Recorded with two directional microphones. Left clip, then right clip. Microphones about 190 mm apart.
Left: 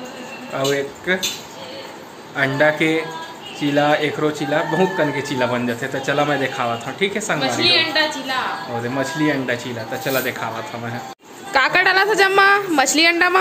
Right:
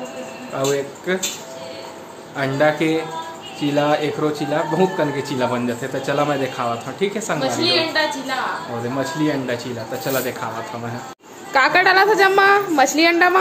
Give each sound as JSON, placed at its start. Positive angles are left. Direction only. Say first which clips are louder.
{"t": 0.6, "sound": "speech", "louder": "left 1 dB", "side_deg": 0}
{"t": 2.3, "sound": "speech", "louder": "left 1 dB", "side_deg": 0}
{"t": 7.6, "sound": "a woman's voice", "louder": "left 3 dB", "side_deg": -25}
{"t": 8.9, "sound": "speech", "louder": "left 1 dB", "side_deg": 5}
{"t": 11.5, "sound": "speech", "louder": "right 1 dB", "side_deg": 0}